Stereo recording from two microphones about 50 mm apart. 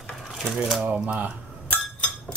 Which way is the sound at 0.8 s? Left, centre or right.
Right.